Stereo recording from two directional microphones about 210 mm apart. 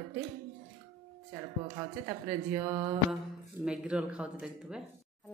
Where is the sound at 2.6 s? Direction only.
15° right (ahead or behind).